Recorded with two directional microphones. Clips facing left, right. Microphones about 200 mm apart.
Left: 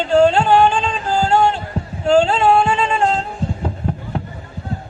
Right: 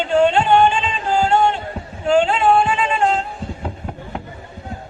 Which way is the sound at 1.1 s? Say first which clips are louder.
Left 1 dB; 35° left (ahead or behind).